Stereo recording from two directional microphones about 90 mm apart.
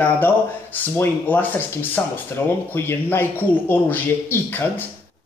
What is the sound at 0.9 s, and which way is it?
Speech, 20° left (ahead or behind).